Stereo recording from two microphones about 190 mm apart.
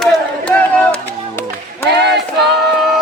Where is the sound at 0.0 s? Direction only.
5° left (ahead or behind).